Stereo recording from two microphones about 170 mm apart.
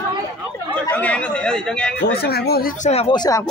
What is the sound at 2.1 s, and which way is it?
Speech, 70° left (ahead or behind).